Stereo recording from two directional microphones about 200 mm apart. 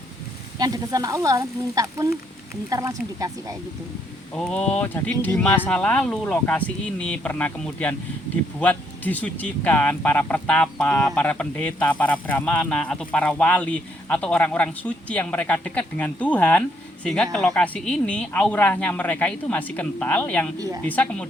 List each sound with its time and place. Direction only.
0.6 s speech: 20° right (ahead or behind)
4.4 s speech: 5° left (ahead or behind)
20.6 s speech: 15° right (ahead or behind)
20.8 s speech: 5° left (ahead or behind)